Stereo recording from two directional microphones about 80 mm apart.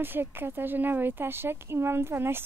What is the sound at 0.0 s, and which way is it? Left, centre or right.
A woman's voice, right.